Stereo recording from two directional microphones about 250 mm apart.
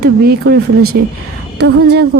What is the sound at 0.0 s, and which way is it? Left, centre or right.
A woman's voice, right.